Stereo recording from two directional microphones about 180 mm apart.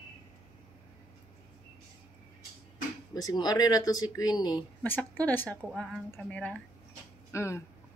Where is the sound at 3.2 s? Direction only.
20° left (ahead or behind).